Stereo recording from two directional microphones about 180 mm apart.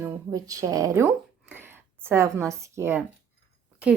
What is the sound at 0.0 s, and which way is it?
Speech, 20° right (ahead or behind).